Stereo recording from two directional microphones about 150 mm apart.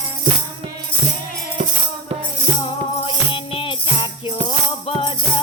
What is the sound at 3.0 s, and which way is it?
Music, 35° left (ahead or behind).